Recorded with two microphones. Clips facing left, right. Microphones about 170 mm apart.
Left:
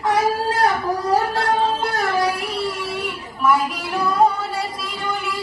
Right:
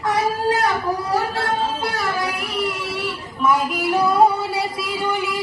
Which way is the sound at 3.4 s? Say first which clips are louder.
Even; centre (ahead or behind).